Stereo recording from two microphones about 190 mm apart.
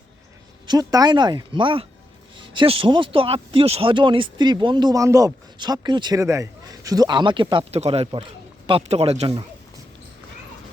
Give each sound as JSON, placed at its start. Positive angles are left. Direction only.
{"t": 0.7, "sound": "speech", "side_deg": -20}